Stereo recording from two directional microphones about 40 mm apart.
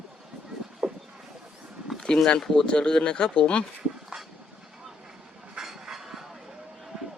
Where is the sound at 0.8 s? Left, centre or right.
Right.